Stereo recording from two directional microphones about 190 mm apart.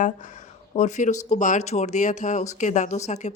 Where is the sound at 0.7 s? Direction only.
40° left (ahead or behind).